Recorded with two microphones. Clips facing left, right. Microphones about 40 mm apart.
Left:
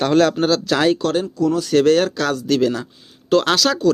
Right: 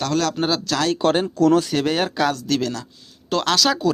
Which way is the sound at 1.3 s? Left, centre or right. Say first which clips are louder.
Right 5 dB; right.